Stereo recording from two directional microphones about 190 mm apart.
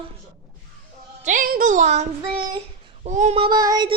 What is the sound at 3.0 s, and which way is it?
Child singing, 40° right (ahead or behind).